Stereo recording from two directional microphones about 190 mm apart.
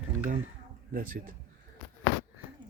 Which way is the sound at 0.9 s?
45° right (ahead or behind).